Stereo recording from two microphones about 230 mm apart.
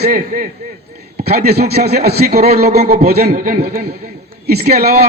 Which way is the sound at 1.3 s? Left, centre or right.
Right.